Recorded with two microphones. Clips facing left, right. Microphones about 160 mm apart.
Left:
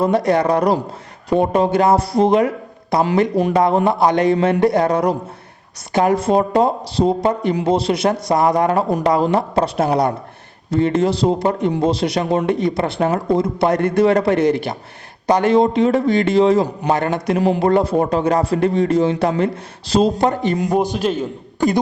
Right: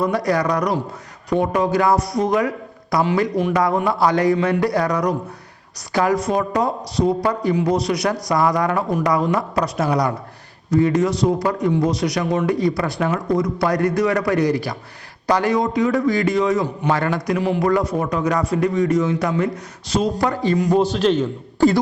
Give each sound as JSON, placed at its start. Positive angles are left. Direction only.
{"t": 0.0, "sound": "speech", "side_deg": 25}
{"t": 17.3, "sound": "speech", "side_deg": 40}
{"t": 17.6, "sound": "a man's voice", "side_deg": 30}